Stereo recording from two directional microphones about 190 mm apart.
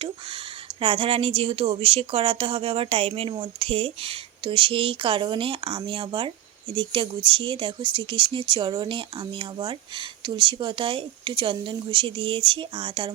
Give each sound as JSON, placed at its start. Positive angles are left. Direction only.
{"t": 0.8, "sound": "speech", "side_deg": -30}